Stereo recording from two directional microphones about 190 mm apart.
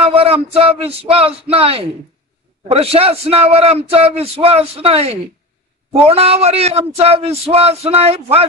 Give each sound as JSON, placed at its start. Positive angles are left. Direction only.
{"t": 0.0, "sound": "speech", "side_deg": -30}